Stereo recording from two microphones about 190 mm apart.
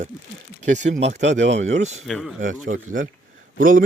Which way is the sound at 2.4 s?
40° right (ahead or behind).